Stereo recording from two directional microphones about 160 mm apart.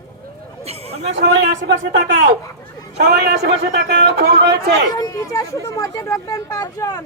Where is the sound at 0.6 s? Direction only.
40° right (ahead or behind).